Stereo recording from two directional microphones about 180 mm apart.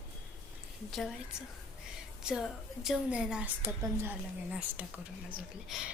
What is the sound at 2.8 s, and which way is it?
A woman's voice, 5° right (ahead or behind).